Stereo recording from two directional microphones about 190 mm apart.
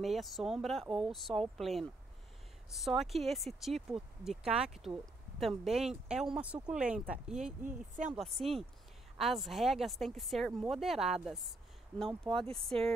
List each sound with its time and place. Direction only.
0.0 s speech: centre (ahead or behind)
7.6 s speech: 40° right (ahead or behind)
8.1 s speech: centre (ahead or behind)